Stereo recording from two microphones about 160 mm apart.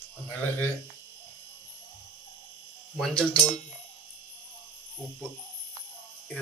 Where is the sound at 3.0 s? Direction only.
5° left (ahead or behind).